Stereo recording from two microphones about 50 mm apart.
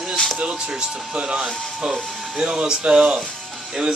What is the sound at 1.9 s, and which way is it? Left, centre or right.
Speech, centre.